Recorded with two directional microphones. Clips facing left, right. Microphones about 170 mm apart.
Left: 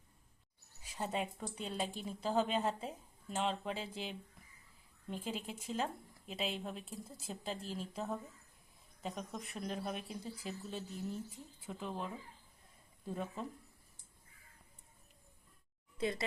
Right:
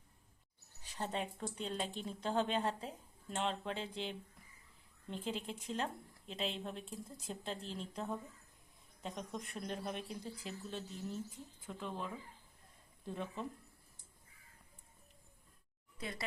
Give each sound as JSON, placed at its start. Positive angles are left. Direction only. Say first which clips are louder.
{"t": 0.8, "sound": "speech", "louder": "left 2 dB", "side_deg": 10}
{"t": 16.0, "sound": "speech", "louder": "left 9 dB", "side_deg": 25}